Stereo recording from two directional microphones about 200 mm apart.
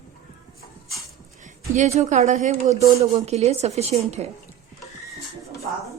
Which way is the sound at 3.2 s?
35° right (ahead or behind).